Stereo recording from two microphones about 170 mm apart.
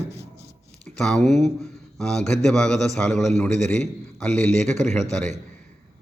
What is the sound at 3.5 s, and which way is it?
Speech, 45° right (ahead or behind).